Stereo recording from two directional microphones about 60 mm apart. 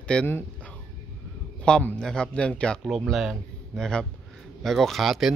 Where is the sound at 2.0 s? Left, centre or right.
Centre.